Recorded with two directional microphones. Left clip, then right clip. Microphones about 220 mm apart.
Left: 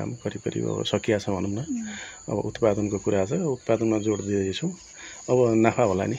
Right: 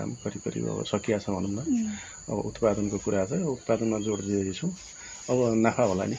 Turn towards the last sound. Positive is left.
turn(degrees=50)  # may be behind; listen again after turning